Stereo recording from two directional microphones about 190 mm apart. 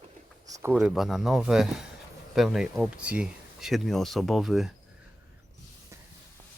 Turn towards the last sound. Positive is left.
turn(degrees=0)  # may be behind; listen again after turning